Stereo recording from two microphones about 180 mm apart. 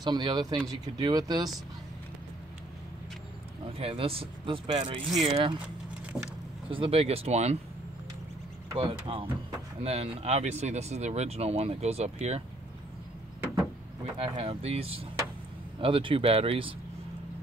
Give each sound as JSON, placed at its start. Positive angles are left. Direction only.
{"t": 0.0, "sound": "speech", "side_deg": -25}
{"t": 3.7, "sound": "speech", "side_deg": -30}
{"t": 6.1, "sound": "speech", "side_deg": -5}
{"t": 6.7, "sound": "speech", "side_deg": -30}
{"t": 8.7, "sound": "speech", "side_deg": -30}
{"t": 14.1, "sound": "speech", "side_deg": -35}